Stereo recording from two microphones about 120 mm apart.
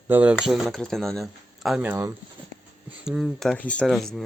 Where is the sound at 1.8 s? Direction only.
15° right (ahead or behind).